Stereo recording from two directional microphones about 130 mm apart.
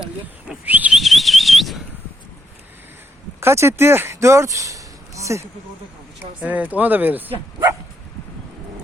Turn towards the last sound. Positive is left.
turn(degrees=-15)  # may be behind; listen again after turning